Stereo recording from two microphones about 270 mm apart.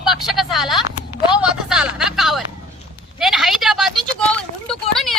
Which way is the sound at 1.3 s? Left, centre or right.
Centre.